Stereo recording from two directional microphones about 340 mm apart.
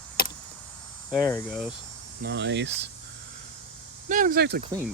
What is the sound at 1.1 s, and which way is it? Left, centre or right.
Cricket, centre.